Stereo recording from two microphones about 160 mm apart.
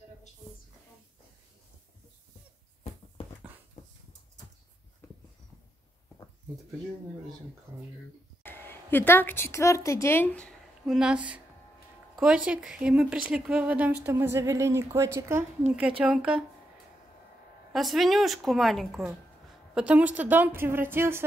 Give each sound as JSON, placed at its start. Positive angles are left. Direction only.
{"t": 3.8, "sound": "dog", "side_deg": 45}
{"t": 7.7, "sound": "speech", "side_deg": -15}
{"t": 8.5, "sound": "a woman's voice", "side_deg": 15}
{"t": 10.9, "sound": "speech", "side_deg": -5}
{"t": 16.0, "sound": "a woman's voice", "side_deg": -5}
{"t": 17.7, "sound": "a woman's voice", "side_deg": 0}